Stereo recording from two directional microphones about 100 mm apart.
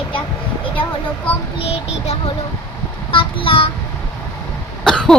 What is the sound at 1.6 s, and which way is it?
Child singing, 90° left.